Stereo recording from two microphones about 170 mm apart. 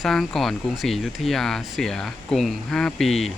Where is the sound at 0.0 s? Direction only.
Centre (ahead or behind).